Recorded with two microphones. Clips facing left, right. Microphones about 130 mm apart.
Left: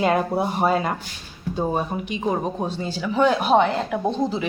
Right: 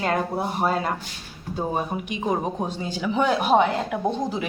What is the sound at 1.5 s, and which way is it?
Speech, 10° right (ahead or behind).